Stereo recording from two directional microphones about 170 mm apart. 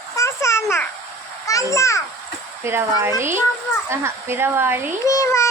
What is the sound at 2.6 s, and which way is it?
Speech, 15° right (ahead or behind).